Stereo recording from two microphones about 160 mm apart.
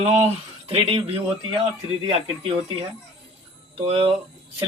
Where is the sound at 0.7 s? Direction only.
35° right (ahead or behind).